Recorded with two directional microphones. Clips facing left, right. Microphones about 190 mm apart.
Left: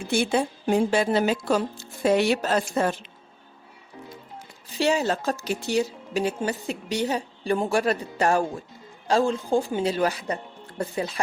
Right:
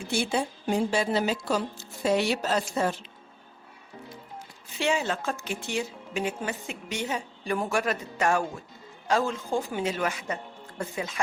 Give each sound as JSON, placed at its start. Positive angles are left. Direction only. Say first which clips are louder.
{"t": 0.1, "sound": "speech", "louder": "left 4 dB", "side_deg": 55}
{"t": 4.7, "sound": "a woman's voice", "louder": "left 4 dB", "side_deg": 35}